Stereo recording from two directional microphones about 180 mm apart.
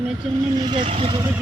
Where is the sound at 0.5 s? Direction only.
25° right (ahead or behind).